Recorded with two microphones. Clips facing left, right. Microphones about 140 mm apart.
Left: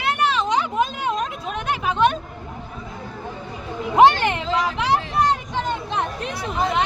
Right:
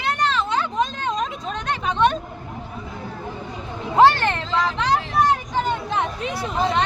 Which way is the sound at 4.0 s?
15° left (ahead or behind).